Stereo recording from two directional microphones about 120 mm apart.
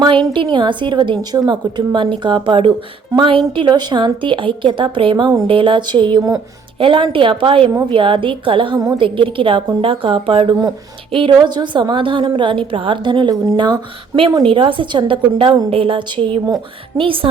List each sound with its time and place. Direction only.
0.0 s a woman's voice: 40° right (ahead or behind)
14.4 s a woman's voice: 45° right (ahead or behind)
16.9 s a woman's voice: 30° right (ahead or behind)